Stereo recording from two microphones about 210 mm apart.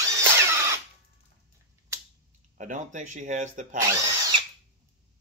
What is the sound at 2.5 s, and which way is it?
Speech, 35° right (ahead or behind).